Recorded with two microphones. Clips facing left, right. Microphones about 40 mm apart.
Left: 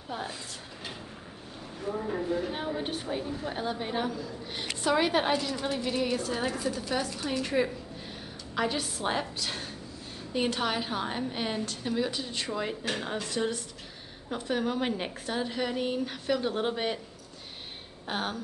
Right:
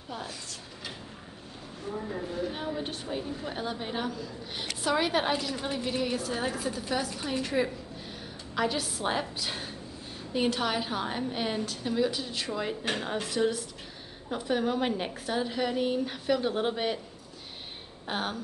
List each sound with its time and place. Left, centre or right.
1.9 s speech: left
2.5 s a woman's voice: centre
18.0 s a woman's voice: centre